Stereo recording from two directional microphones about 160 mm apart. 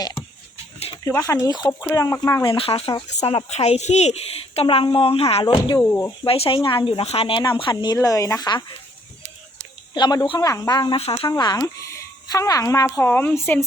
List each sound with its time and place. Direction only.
1.0 s speech: 20° left (ahead or behind)
2.4 s speech: 35° left (ahead or behind)
5.8 s speech: 10° left (ahead or behind)
6.2 s speech: 35° left (ahead or behind)
9.9 s speech: 25° left (ahead or behind)
10.9 s speech: 35° left (ahead or behind)
11.3 s speech: 25° left (ahead or behind)